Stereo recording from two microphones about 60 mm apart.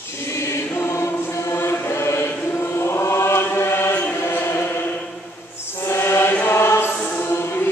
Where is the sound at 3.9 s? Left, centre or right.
Left.